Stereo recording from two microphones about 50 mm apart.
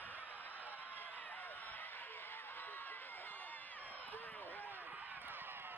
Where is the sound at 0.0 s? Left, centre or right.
Left.